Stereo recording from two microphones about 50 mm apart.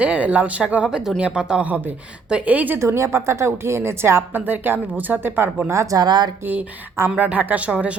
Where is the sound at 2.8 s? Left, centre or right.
Right.